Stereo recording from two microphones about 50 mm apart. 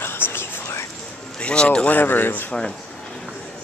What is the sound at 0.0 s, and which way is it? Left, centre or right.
Whispering, left.